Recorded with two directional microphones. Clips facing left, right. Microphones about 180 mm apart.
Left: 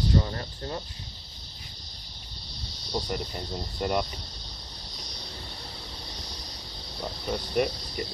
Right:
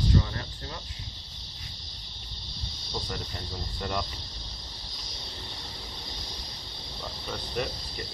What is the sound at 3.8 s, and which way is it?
Speech, 15° left (ahead or behind).